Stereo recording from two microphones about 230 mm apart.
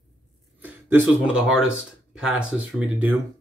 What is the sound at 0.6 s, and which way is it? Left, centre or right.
Speech, centre.